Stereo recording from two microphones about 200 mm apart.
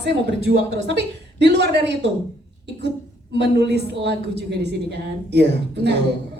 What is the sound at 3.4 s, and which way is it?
Speech, 55° right (ahead or behind).